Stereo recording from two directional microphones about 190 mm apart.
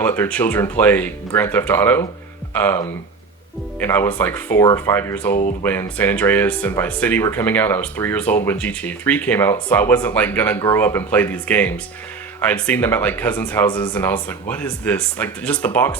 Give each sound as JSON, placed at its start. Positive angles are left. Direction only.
{"t": 0.0, "sound": "speech", "side_deg": 10}
{"t": 5.3, "sound": "speech", "side_deg": 40}
{"t": 5.6, "sound": "speech", "side_deg": 10}